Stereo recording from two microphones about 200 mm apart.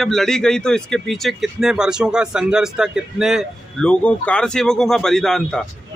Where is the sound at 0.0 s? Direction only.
Centre (ahead or behind).